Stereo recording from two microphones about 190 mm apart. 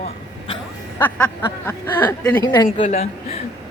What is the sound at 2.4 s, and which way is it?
Speech, 25° left (ahead or behind).